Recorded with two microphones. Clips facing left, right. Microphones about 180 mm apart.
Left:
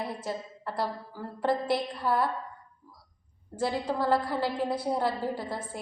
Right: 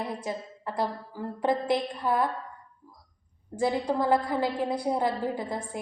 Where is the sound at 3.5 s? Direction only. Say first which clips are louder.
Right 3 dB; 15° right (ahead or behind).